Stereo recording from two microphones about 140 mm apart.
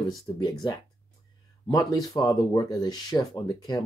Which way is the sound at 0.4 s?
30° left (ahead or behind).